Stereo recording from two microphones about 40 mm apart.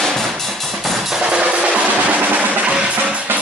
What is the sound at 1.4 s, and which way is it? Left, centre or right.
Music, right.